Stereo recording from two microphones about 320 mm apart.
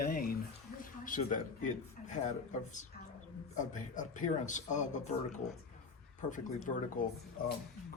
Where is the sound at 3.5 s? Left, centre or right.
Left.